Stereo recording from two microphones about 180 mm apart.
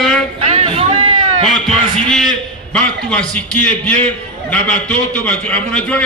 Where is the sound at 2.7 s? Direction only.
5° left (ahead or behind).